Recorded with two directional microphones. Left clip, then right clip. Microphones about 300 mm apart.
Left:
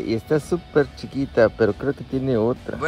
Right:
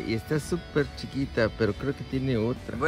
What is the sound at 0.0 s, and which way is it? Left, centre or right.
Speech, centre.